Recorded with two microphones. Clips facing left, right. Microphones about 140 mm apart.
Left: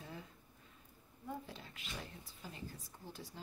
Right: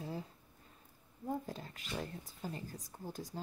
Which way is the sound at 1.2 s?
40° right (ahead or behind).